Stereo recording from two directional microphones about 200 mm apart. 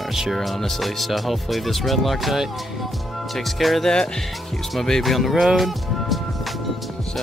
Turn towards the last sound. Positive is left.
turn(degrees=0)  # may be behind; listen again after turning